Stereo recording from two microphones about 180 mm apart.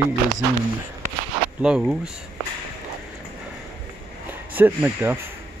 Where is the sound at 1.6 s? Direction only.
5° right (ahead or behind).